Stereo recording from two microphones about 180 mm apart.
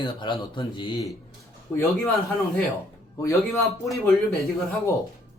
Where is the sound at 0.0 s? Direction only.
25° left (ahead or behind).